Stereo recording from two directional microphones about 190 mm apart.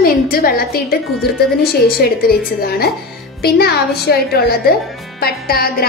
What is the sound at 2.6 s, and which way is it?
A woman's voice, 55° left (ahead or behind).